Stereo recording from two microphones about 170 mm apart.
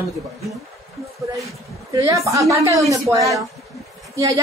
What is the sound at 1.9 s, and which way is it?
A woman's voice, 20° right (ahead or behind).